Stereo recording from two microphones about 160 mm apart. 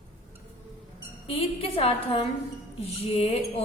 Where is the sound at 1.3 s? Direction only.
35° left (ahead or behind).